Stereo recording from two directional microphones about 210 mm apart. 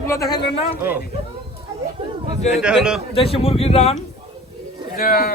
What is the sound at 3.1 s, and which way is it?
Speech, 25° left (ahead or behind).